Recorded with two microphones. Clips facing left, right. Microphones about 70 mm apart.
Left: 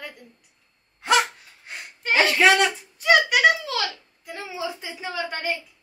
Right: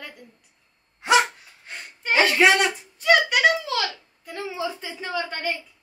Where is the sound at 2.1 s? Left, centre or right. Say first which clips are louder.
Even; centre.